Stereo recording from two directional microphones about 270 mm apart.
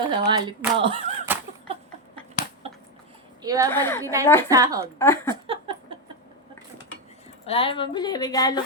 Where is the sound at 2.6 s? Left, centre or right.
Right.